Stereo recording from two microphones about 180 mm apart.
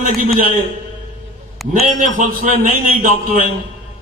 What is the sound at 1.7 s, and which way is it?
A man's voice, 45° right (ahead or behind).